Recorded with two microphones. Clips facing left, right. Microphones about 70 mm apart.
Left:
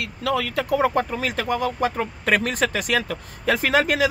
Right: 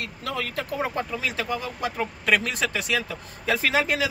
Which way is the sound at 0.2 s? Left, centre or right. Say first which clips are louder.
Left 7 dB; left.